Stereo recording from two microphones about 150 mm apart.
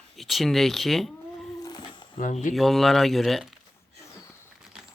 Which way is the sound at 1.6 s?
30° left (ahead or behind).